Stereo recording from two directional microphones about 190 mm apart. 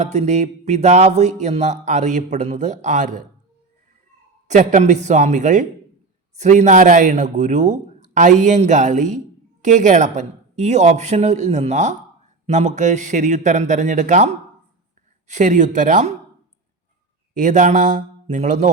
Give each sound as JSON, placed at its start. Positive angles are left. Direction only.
{"t": 0.0, "sound": "speech", "side_deg": -35}
{"t": 4.4, "sound": "speech", "side_deg": -40}
{"t": 15.3, "sound": "speech", "side_deg": -40}
{"t": 17.3, "sound": "speech", "side_deg": -40}